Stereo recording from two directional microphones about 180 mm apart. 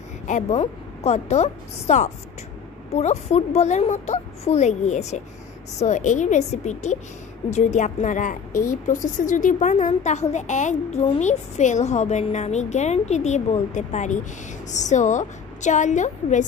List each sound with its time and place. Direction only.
0.3 s a woman's voice: 35° left (ahead or behind)